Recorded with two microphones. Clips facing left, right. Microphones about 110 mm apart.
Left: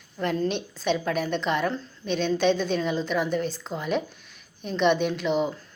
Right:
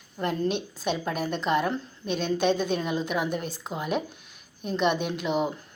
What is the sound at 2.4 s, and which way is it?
Speech, 50° right (ahead or behind).